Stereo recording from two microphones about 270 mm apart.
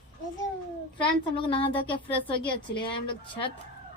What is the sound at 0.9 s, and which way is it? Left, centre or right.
A child's voice, centre.